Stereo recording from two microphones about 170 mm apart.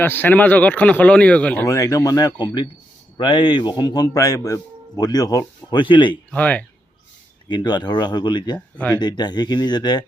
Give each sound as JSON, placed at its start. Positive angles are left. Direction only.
{"t": 0.0, "sound": "a man's voice", "side_deg": 10}
{"t": 6.3, "sound": "speech", "side_deg": 10}
{"t": 7.4, "sound": "a man's voice", "side_deg": 25}
{"t": 8.5, "sound": "speech", "side_deg": 5}
{"t": 9.0, "sound": "a man's voice", "side_deg": 25}